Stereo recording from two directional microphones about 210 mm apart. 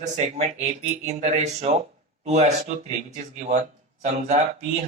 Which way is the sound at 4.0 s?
35° right (ahead or behind).